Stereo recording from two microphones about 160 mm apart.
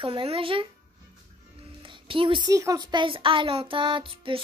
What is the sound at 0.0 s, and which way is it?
A child's voice, 35° right (ahead or behind).